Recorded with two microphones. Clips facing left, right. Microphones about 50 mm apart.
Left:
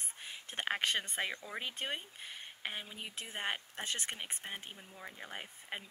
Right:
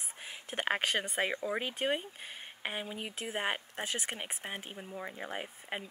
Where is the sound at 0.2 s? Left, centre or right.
Centre.